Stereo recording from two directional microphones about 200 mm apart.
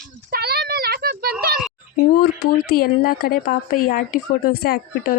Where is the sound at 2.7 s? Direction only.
50° left (ahead or behind).